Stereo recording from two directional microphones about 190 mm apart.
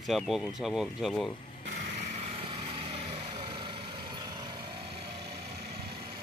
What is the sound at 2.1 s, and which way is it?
Vehicle, 30° right (ahead or behind).